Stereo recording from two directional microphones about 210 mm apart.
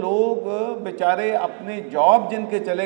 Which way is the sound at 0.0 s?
30° right (ahead or behind).